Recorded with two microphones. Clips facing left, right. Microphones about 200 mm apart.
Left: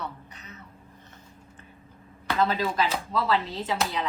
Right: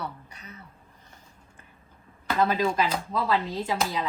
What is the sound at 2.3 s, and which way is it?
A woman's voice, 10° right (ahead or behind).